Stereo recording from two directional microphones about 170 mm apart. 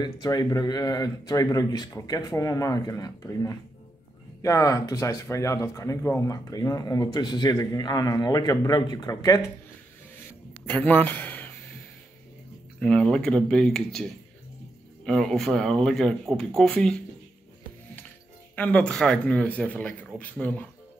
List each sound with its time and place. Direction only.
0.0 s speech: 20° left (ahead or behind)
10.6 s speech: 10° left (ahead or behind)
12.8 s speech: 5° left (ahead or behind)
15.0 s speech: 5° left (ahead or behind)
18.6 s speech: 10° left (ahead or behind)